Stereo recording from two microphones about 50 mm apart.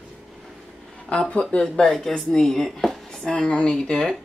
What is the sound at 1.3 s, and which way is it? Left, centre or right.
Speech, left.